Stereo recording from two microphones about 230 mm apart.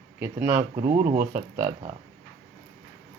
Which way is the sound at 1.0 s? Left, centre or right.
Right.